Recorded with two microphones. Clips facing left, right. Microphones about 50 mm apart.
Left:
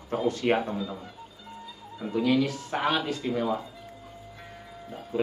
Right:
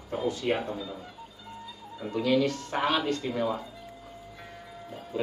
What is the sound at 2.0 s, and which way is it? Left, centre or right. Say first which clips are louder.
Speech: left 1 dB; centre.